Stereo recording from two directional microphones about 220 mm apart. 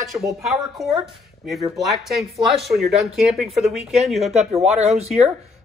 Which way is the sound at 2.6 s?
Centre (ahead or behind).